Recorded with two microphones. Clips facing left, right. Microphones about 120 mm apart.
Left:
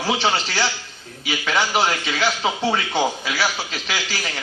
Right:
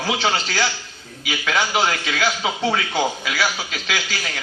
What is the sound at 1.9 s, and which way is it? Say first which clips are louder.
Speech: even; 20° left (ahead or behind).